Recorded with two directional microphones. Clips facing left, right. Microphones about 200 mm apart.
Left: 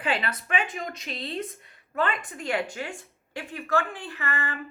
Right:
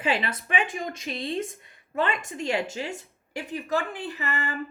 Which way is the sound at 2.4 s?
25° right (ahead or behind).